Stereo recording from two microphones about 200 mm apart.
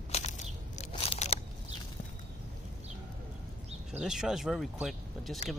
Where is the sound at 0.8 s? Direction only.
35° left (ahead or behind).